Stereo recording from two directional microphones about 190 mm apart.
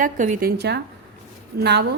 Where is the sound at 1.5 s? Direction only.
60° right (ahead or behind).